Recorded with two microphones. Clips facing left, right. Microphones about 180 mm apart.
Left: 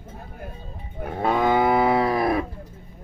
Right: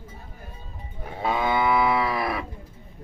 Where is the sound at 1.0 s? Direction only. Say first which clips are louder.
Left 4 dB; 55° left (ahead or behind).